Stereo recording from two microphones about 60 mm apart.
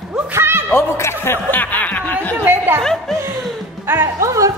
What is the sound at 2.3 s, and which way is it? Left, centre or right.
Chatter, right.